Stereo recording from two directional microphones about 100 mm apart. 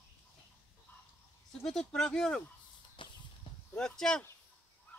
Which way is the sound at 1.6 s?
5° left (ahead or behind).